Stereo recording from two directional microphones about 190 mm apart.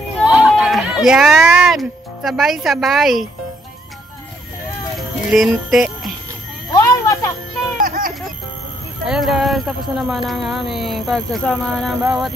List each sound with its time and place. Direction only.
0.2 s speech: 5° right (ahead or behind)
4.9 s speech: centre (ahead or behind)
6.7 s a sound: 15° left (ahead or behind)
7.7 s music: 50° right (ahead or behind)
9.0 s speech: centre (ahead or behind)